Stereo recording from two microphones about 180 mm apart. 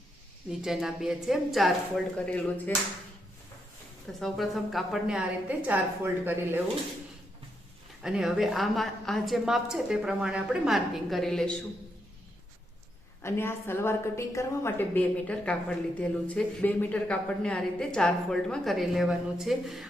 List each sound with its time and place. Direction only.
0.6 s a woman's voice: centre (ahead or behind)
4.2 s speech: centre (ahead or behind)
8.0 s speech: 5° right (ahead or behind)
13.2 s a woman's voice: 15° left (ahead or behind)